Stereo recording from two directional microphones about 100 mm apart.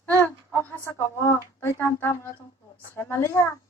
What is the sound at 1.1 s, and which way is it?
Speech, 25° left (ahead or behind).